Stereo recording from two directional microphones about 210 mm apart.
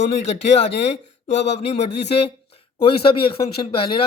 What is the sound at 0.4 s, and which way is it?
A man's voice, 30° left (ahead or behind).